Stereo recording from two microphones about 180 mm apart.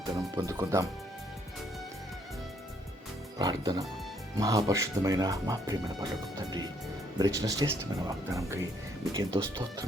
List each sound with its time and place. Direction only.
0.0 s speech: 20° right (ahead or behind)
3.3 s speech: 20° right (ahead or behind)
7.2 s speech: 20° right (ahead or behind)
9.1 s speech: 30° right (ahead or behind)